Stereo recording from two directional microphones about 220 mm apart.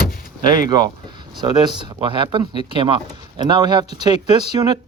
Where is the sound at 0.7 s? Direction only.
20° right (ahead or behind).